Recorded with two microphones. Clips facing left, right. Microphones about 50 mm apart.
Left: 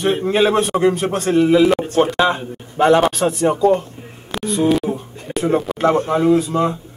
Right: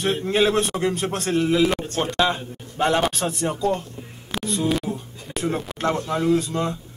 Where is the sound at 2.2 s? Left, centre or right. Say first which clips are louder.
Left 5 dB; left.